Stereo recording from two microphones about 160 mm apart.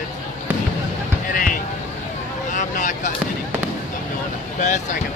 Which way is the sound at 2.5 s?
55° left (ahead or behind).